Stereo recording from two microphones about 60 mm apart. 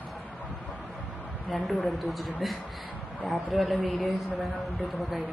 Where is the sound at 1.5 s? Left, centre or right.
Centre.